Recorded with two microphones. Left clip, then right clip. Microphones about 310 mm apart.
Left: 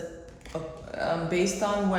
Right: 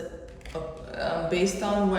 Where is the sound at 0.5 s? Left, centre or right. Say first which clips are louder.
Even; left.